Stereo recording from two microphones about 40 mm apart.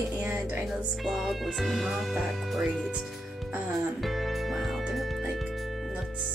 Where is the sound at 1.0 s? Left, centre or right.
Centre.